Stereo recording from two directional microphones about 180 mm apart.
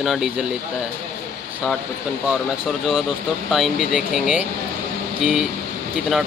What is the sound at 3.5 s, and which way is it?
Speech, centre (ahead or behind).